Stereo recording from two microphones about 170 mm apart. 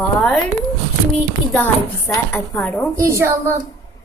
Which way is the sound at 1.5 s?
10° left (ahead or behind).